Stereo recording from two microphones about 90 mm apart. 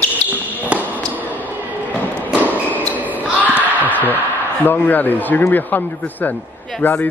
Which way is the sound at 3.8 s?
20° left (ahead or behind).